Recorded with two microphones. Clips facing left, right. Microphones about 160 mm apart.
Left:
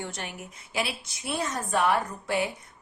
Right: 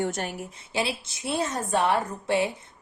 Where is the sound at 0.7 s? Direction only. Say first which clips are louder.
Right 3 dB; 25° right (ahead or behind).